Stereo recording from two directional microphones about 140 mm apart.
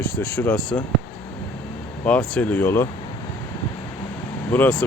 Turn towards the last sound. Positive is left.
turn(degrees=10)  # may be behind; listen again after turning